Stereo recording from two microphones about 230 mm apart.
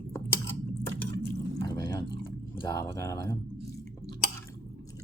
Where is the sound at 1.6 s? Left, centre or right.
Centre.